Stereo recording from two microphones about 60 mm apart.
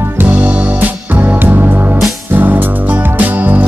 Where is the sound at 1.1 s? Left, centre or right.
Right.